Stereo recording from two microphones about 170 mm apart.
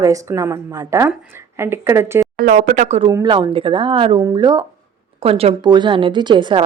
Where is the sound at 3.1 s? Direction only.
25° right (ahead or behind).